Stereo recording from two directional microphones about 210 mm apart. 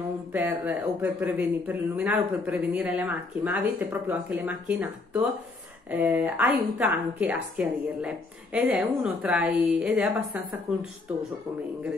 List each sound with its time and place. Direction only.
0.3 s speech: 10° right (ahead or behind)